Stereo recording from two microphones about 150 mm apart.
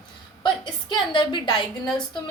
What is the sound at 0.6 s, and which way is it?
A woman's voice, 30° left (ahead or behind).